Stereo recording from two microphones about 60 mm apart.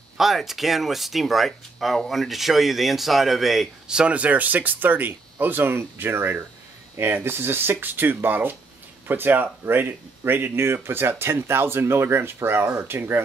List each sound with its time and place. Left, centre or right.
0.2 s speech: centre
3.8 s speech: centre; by 13.2 s right